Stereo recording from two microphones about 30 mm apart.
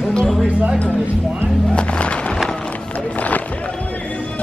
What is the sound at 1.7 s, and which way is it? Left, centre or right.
Music, left.